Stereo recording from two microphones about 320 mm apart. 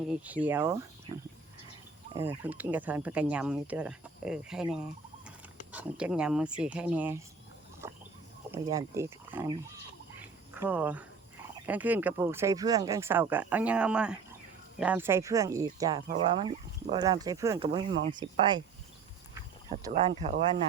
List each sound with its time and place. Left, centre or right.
0.1 s speech: centre
2.1 s speech: centre
7.8 s a sound: centre
8.5 s speech: centre
10.2 s cricket: centre
11.6 s speech: centre
19.7 s speech: centre